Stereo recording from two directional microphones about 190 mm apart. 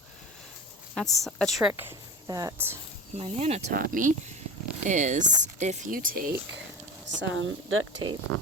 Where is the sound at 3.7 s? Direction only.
45° right (ahead or behind).